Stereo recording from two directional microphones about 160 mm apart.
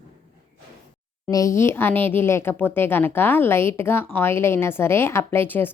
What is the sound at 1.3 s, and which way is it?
Speech, 20° left (ahead or behind).